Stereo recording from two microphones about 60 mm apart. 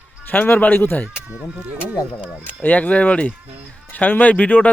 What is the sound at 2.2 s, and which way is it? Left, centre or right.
Speech, right.